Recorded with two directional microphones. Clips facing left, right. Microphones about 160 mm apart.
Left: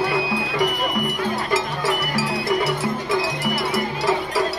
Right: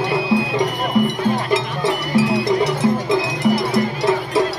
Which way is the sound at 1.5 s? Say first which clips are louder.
Right 3 dB; 20° right (ahead or behind).